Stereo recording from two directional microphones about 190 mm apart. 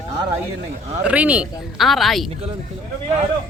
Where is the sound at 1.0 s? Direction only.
5° right (ahead or behind).